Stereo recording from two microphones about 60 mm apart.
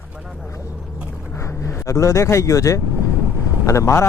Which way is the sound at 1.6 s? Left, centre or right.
Left.